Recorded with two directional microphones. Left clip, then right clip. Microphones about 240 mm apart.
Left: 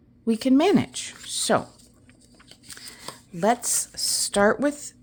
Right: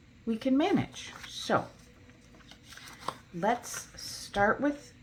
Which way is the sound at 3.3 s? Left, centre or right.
Left.